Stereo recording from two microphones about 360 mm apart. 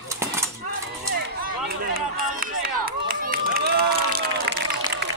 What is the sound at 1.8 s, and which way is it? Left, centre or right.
Speech, right.